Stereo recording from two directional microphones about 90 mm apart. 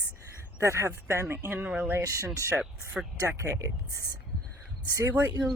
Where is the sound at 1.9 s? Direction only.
25° right (ahead or behind).